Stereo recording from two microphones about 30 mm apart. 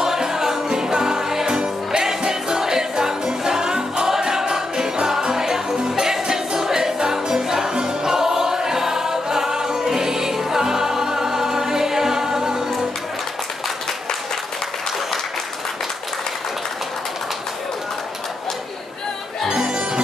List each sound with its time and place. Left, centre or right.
0.0 s music: centre
19.4 s music: right